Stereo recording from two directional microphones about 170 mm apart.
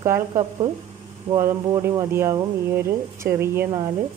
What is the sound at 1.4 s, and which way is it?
Speech, 15° right (ahead or behind).